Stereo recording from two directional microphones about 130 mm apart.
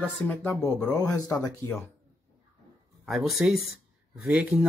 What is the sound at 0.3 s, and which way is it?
Speech, 10° left (ahead or behind).